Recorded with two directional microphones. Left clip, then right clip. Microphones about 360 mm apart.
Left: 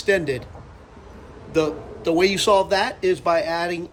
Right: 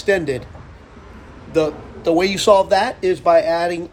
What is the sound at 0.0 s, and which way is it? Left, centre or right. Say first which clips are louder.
Speech: right 2 dB; centre.